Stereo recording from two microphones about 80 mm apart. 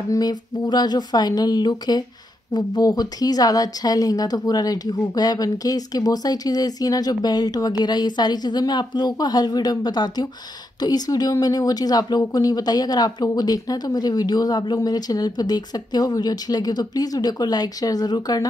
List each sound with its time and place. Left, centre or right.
0.1 s a woman's voice: left